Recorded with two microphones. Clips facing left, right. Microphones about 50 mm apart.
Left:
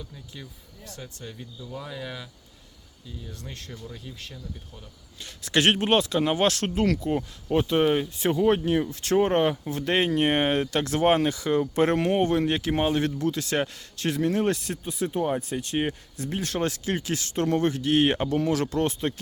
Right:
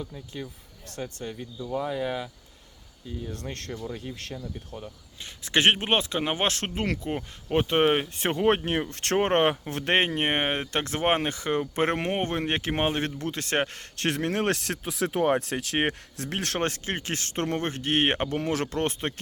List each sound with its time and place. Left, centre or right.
0.9 s speech: right
1.7 s speech: right
4.1 s speech: right
5.2 s speech: right
16.6 s speech: right